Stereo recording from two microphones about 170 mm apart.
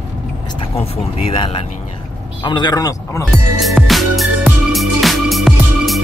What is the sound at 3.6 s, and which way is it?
Music, centre (ahead or behind).